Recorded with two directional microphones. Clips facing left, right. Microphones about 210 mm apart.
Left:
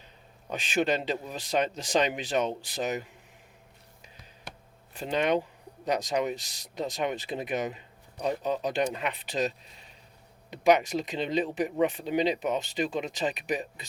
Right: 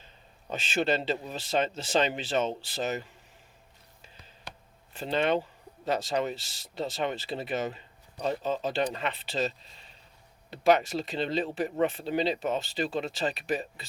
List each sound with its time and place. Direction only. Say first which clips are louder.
0.5 s speech: left 1 dB; 15° left (ahead or behind)
4.9 s speech: even; 10° left (ahead or behind)